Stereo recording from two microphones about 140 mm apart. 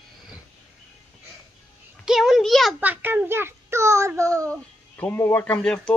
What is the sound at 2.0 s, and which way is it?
Speech, 5° right (ahead or behind).